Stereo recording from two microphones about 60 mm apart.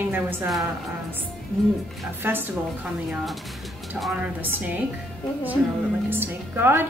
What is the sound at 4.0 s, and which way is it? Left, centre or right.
Speech, centre.